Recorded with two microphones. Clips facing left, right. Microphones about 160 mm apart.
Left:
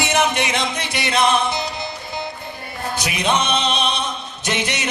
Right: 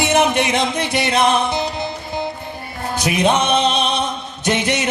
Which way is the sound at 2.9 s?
50° right (ahead or behind).